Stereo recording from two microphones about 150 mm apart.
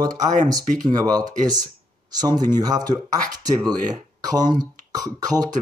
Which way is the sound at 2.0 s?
25° right (ahead or behind).